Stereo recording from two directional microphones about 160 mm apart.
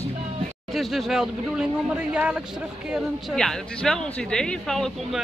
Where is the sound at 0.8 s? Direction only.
Centre (ahead or behind).